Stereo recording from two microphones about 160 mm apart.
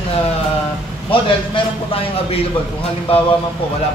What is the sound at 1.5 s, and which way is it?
Speech, 35° left (ahead or behind).